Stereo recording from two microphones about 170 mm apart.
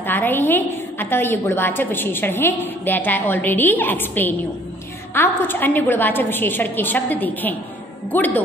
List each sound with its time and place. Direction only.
0.0 s a woman's voice: 10° left (ahead or behind)